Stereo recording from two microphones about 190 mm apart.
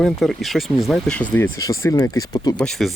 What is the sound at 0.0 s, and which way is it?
Speech, centre (ahead or behind).